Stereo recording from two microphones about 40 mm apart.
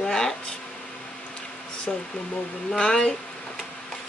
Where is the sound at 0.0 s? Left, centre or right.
Centre.